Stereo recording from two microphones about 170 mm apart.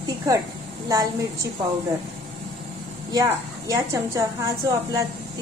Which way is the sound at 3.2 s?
20° right (ahead or behind).